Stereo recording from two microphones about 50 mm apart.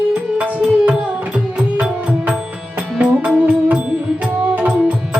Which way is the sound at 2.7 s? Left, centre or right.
Right.